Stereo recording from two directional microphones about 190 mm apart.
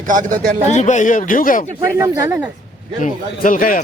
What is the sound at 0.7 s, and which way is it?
Speech, 40° left (ahead or behind).